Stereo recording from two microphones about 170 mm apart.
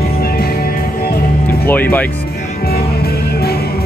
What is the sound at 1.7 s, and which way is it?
Speech, 10° left (ahead or behind).